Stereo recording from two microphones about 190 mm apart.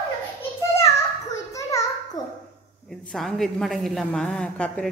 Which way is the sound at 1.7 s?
15° left (ahead or behind).